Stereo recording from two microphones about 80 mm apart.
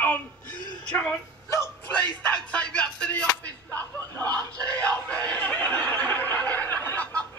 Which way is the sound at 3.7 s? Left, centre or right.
Left.